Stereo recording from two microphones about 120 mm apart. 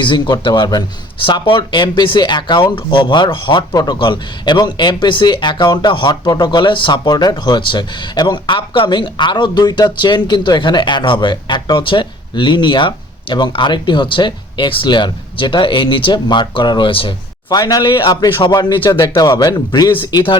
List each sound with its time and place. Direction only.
0.0 s speech: 40° left (ahead or behind)
17.5 s speech: 35° left (ahead or behind)